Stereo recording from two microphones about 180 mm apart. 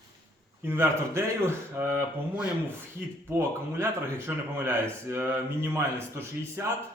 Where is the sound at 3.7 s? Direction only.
15° right (ahead or behind).